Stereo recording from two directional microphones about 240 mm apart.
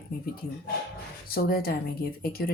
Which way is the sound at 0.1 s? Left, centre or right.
Left.